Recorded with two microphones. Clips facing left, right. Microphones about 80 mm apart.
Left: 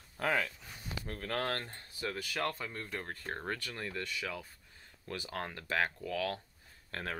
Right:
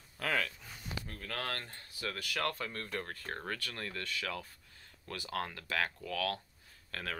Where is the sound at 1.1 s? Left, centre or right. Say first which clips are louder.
Left 6 dB; left.